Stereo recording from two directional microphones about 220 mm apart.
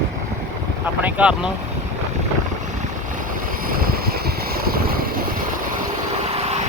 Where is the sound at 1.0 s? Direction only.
5° right (ahead or behind).